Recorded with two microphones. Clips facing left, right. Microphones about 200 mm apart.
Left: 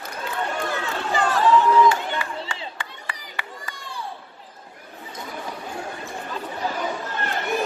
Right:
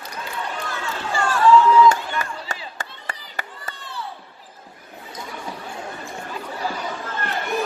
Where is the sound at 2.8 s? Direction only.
45° right (ahead or behind).